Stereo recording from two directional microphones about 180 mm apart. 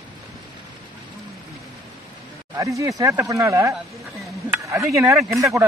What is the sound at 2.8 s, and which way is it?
Speech, 20° right (ahead or behind).